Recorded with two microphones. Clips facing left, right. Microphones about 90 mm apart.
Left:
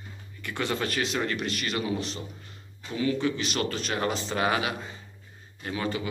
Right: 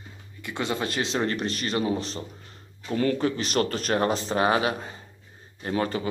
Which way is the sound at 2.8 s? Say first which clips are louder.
Right 3 dB; 50° right (ahead or behind).